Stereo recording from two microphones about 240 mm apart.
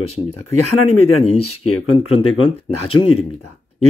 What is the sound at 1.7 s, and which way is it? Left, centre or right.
Speech, left.